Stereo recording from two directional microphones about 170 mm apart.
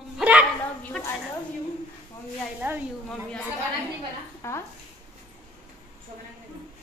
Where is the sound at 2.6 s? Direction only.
10° right (ahead or behind).